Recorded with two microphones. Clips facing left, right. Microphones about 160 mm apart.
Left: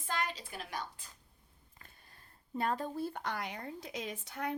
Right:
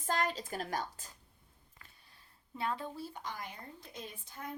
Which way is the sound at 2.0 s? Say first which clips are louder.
Left 3 dB; 50° left (ahead or behind).